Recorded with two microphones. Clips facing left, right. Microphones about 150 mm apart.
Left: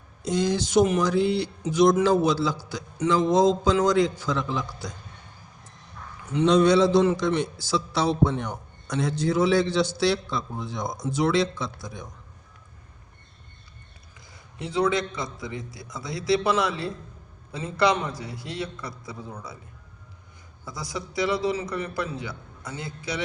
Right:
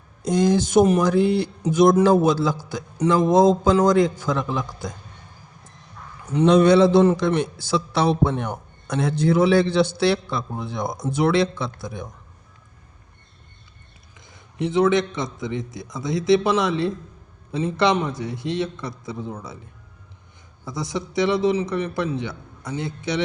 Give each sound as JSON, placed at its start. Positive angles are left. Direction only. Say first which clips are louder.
{"t": 0.3, "sound": "a man's voice", "louder": "right 5 dB", "side_deg": -50}
{"t": 6.3, "sound": "a man's voice", "louder": "right 4 dB", "side_deg": -55}
{"t": 14.3, "sound": "a man's voice", "louder": "right 6 dB", "side_deg": -20}
{"t": 20.7, "sound": "a man's voice", "louder": "right 6 dB", "side_deg": -25}